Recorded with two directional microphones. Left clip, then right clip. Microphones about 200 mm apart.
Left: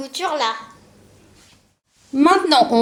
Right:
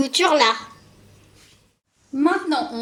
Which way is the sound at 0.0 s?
50° right (ahead or behind).